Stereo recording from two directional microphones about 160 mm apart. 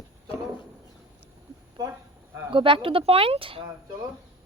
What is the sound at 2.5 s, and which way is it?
Speech, 30° right (ahead or behind).